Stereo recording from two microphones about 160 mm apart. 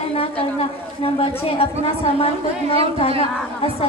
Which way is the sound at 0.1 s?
35° left (ahead or behind).